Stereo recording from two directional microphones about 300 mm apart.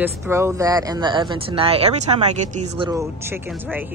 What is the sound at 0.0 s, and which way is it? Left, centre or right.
Speech, centre.